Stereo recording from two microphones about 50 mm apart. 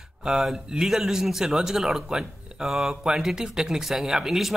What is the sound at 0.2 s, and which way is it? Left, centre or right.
Speech, centre.